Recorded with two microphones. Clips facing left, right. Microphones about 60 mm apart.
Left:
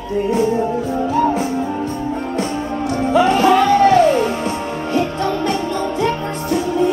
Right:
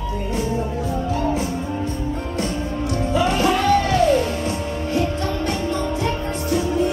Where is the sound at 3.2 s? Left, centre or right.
Left.